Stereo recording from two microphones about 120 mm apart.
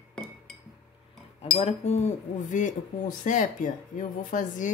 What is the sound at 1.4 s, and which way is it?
Speech, 60° left (ahead or behind).